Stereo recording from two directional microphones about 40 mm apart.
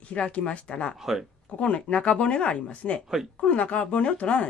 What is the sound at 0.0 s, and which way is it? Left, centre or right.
Speech, left.